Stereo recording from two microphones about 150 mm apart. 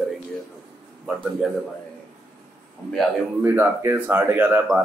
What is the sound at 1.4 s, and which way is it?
Speech, 5° right (ahead or behind).